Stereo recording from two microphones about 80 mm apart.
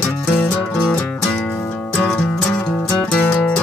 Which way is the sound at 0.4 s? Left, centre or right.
Centre.